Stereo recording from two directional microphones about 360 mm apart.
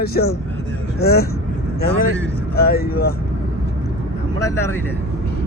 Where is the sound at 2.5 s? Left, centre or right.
Left.